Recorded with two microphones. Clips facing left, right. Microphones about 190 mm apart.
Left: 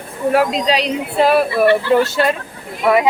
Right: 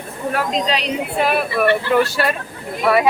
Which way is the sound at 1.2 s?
35° left (ahead or behind).